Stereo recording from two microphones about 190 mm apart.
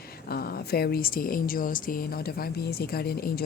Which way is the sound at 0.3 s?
55° left (ahead or behind).